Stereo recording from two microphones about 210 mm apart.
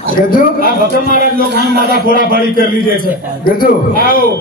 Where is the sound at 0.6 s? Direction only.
40° left (ahead or behind).